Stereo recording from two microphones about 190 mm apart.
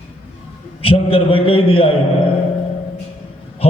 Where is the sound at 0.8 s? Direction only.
30° left (ahead or behind).